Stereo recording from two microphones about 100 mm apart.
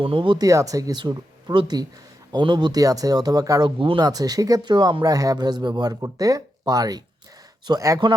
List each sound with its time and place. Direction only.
0.0 s speech: 60° right (ahead or behind)
0.3 s speech: 35° right (ahead or behind)
3.8 s speech: 60° right (ahead or behind)
4.0 s speech: 40° right (ahead or behind)